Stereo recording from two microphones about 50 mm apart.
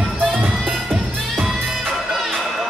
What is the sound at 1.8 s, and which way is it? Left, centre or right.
Music, centre.